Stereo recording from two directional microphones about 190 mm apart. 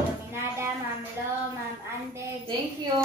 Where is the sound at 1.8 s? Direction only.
15° right (ahead or behind).